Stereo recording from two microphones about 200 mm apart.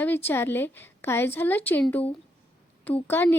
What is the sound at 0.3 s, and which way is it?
A woman's voice, 10° left (ahead or behind).